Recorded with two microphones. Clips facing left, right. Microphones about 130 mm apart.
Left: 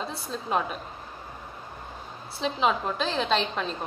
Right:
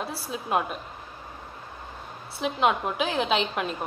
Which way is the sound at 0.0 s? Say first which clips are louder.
Right 1 dB; 5° right (ahead or behind).